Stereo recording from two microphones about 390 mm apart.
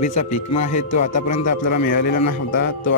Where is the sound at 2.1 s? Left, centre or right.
Left.